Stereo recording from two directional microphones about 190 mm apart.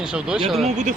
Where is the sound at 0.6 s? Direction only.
40° right (ahead or behind).